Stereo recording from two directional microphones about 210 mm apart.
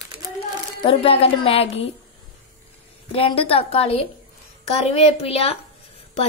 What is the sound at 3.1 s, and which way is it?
A woman's voice, 25° left (ahead or behind).